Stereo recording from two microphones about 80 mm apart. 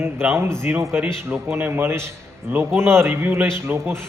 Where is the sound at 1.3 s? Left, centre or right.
Right.